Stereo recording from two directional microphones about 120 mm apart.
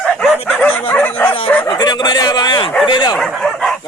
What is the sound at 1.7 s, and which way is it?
Speech, 35° left (ahead or behind).